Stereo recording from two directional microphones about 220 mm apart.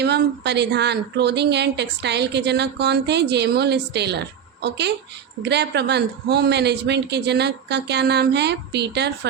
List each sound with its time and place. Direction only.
0.0 s speech: 50° right (ahead or behind)